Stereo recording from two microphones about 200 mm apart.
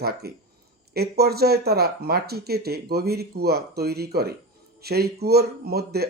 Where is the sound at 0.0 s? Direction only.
50° right (ahead or behind).